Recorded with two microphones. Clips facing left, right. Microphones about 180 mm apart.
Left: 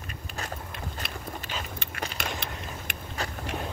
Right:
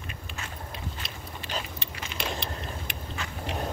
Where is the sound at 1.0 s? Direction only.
55° left (ahead or behind).